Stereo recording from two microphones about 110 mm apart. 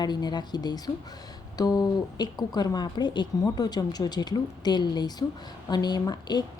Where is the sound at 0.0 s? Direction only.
40° left (ahead or behind).